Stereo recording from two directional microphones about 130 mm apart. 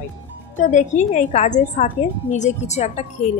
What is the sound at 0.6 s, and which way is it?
A woman's voice, 70° left (ahead or behind).